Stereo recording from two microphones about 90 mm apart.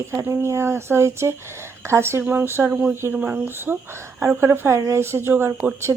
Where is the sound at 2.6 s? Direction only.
15° right (ahead or behind).